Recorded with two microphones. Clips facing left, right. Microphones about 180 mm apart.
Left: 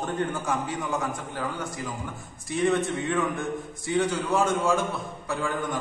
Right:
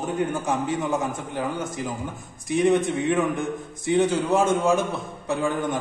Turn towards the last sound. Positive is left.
turn(degrees=-20)  # may be behind; listen again after turning